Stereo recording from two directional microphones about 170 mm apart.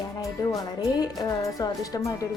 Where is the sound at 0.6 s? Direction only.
20° left (ahead or behind).